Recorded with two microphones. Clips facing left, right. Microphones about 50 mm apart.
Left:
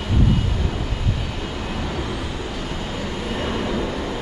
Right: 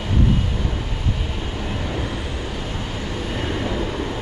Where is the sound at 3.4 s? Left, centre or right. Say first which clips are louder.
Left 1 dB; centre.